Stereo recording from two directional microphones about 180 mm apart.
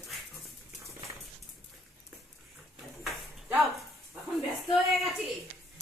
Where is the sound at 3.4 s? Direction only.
Centre (ahead or behind).